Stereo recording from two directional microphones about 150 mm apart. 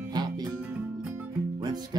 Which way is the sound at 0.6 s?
10° right (ahead or behind).